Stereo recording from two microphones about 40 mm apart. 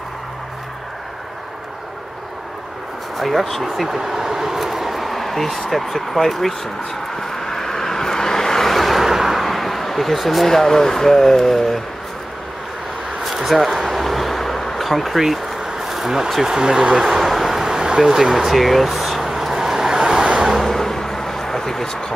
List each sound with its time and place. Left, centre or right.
3.2 s speech: centre
7.2 s vehicle: centre
10.5 s speech: centre
13.2 s a sound: centre
15.9 s vehicle: centre
16.4 s speech: centre
17.0 s a sound: centre
20.3 s vehicle: centre
20.6 s vehicle: centre